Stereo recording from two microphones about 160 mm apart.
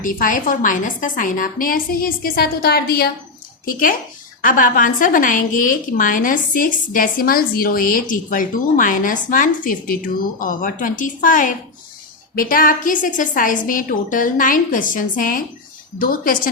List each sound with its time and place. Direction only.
0.0 s a woman's voice: 55° left (ahead or behind); by 3.1 s 75° left (ahead or behind)
3.7 s a woman's voice: 60° left (ahead or behind)